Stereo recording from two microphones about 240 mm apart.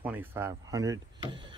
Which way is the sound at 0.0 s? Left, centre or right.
Centre.